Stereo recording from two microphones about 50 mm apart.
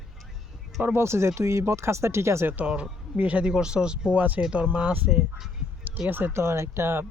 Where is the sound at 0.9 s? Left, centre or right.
Right.